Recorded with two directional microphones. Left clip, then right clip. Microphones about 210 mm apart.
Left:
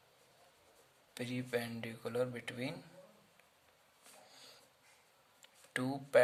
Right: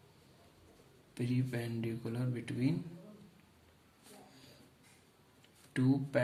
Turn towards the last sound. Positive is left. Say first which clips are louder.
# left 3 dB
turn(degrees=50)  # may be behind; listen again after turning